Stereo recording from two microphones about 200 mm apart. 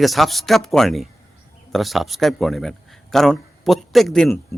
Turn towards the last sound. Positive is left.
turn(degrees=5)  # may be behind; listen again after turning